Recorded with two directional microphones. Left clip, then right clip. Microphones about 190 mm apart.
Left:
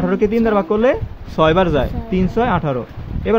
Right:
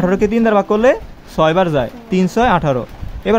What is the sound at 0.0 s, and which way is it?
Speech, 15° right (ahead or behind).